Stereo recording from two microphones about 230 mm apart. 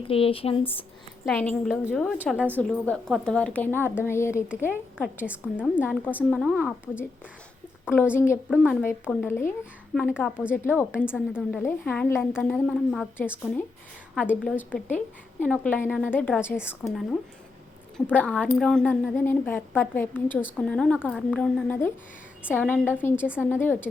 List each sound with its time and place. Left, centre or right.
0.1 s speech: left
1.2 s a woman's voice: centre
2.6 s a woman's voice: centre
4.7 s a woman's voice: centre
8.1 s a woman's voice: centre
8.4 s a woman's voice: centre
10.5 s a woman's voice: centre
10.9 s a woman's voice: centre
11.6 s a woman's voice: centre
14.3 s a woman's voice: centre
14.5 s a woman's voice: centre
17.9 s a woman's voice: centre